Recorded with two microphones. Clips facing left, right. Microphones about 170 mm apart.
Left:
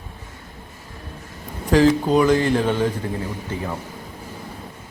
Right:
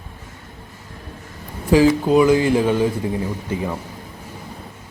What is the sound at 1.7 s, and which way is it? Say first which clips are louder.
A man's voice: right 2 dB; 10° right (ahead or behind).